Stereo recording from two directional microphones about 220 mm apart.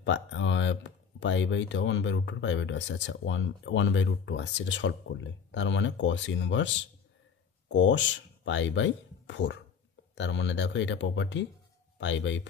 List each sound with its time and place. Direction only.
0.0 s speech: 60° left (ahead or behind)